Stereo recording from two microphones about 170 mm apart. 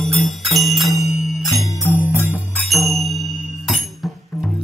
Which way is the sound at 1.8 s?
10° right (ahead or behind).